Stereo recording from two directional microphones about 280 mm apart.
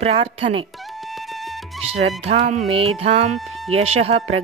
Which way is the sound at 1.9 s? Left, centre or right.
Right.